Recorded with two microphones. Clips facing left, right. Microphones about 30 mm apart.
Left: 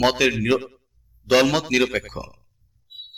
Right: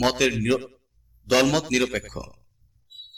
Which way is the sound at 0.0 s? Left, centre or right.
Centre.